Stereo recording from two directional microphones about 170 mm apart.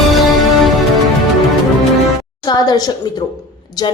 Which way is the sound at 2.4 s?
25° left (ahead or behind).